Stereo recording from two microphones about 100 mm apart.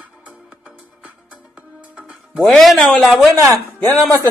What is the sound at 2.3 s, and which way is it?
Speech, centre (ahead or behind).